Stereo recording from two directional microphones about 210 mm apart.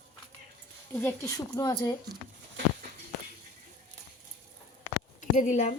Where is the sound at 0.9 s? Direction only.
10° left (ahead or behind).